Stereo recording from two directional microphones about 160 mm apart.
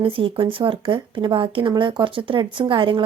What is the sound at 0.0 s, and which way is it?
Speech, 35° right (ahead or behind).